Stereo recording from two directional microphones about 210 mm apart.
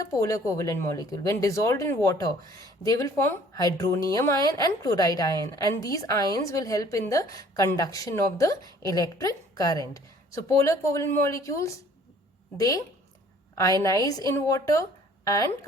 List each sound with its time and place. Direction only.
0.0 s a woman's voice: 15° left (ahead or behind)
13.8 s a woman's voice: 15° left (ahead or behind)